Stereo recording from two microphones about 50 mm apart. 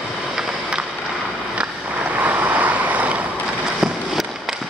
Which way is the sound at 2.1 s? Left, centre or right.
Right.